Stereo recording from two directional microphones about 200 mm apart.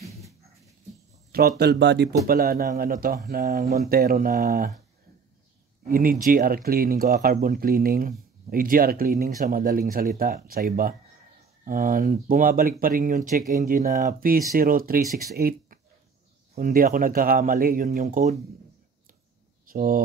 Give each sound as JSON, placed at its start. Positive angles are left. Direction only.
{"t": 1.6, "sound": "speech", "side_deg": -60}
{"t": 2.2, "sound": "speech", "side_deg": -50}
{"t": 5.9, "sound": "speech", "side_deg": -45}
{"t": 19.6, "sound": "speech", "side_deg": -45}